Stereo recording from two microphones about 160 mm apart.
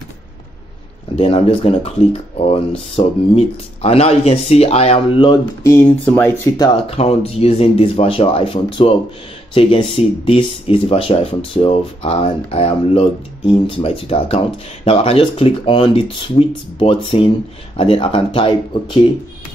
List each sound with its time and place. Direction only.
1.1 s speech: 40° left (ahead or behind); by 5.8 s 25° left (ahead or behind)
5.9 s speech: 10° left (ahead or behind)
6.8 s speech: 40° left (ahead or behind)